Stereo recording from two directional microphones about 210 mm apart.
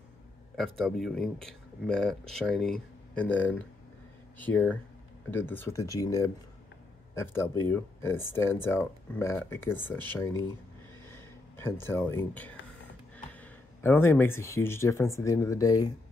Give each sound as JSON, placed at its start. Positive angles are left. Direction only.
{"t": 0.6, "sound": "speech", "side_deg": 0}
{"t": 11.1, "sound": "a sound", "side_deg": 10}
{"t": 13.3, "sound": "speech", "side_deg": 10}